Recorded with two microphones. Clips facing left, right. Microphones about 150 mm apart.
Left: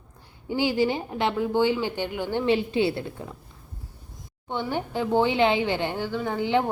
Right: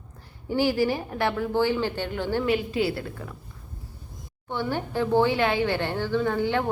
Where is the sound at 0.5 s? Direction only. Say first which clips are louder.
Even; 20° left (ahead or behind).